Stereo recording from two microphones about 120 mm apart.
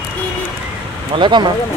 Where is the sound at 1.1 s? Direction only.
40° right (ahead or behind).